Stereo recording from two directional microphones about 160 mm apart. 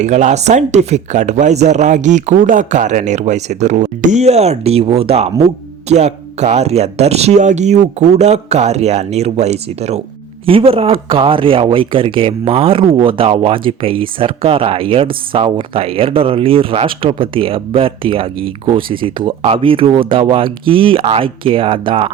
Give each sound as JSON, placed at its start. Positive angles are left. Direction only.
{"t": 0.0, "sound": "speech", "side_deg": -45}